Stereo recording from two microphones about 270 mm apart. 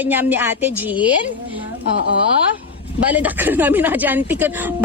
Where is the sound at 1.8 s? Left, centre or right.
Left.